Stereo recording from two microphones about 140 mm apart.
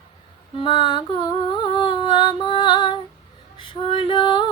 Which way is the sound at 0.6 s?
35° left (ahead or behind).